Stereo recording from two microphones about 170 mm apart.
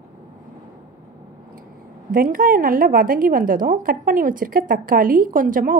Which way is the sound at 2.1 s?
55° right (ahead or behind).